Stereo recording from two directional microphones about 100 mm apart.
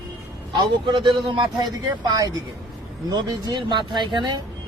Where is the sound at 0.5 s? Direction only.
50° right (ahead or behind).